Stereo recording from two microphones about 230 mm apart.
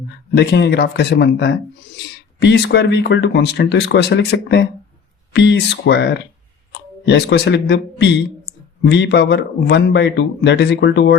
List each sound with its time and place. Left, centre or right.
0.3 s speech: left
8.5 s clicking: left
8.8 s speech: left